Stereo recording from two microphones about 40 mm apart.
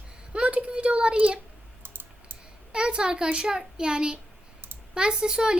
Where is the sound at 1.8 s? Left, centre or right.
Right.